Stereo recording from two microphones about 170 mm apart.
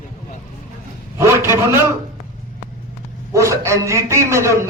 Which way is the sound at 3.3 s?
15° right (ahead or behind).